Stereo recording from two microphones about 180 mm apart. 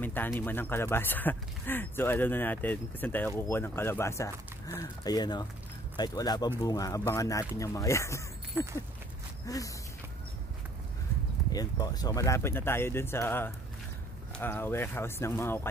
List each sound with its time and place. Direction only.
0.0 s speech: 10° left (ahead or behind)
11.5 s speech: 20° left (ahead or behind)